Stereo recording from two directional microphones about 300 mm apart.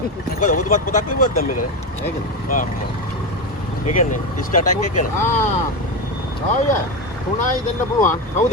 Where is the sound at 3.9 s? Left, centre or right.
Left.